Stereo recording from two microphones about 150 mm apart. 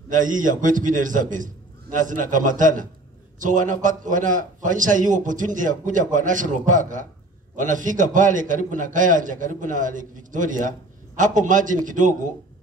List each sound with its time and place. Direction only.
0.1 s a man's voice: 60° right (ahead or behind)